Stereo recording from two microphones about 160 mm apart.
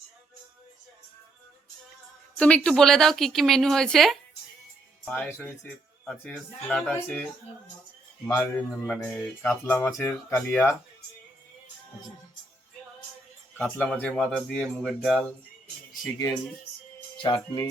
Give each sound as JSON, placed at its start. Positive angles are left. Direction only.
{"t": 2.4, "sound": "speech", "side_deg": 5}
{"t": 8.9, "sound": "speech", "side_deg": 10}
{"t": 13.6, "sound": "speech", "side_deg": 10}
{"t": 16.1, "sound": "speech", "side_deg": 20}